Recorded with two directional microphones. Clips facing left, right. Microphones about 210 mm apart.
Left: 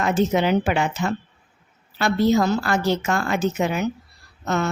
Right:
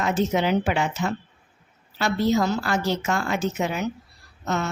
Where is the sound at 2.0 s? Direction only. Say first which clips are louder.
Left 3 dB; 55° left (ahead or behind).